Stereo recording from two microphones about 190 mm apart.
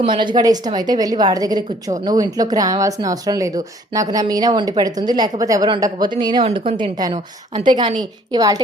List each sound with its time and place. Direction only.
0.0 s a woman's voice: 25° right (ahead or behind)